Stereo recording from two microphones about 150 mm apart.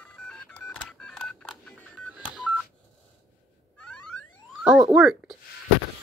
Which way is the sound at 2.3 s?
5° right (ahead or behind).